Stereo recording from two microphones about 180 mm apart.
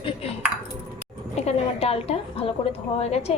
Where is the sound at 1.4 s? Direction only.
35° left (ahead or behind).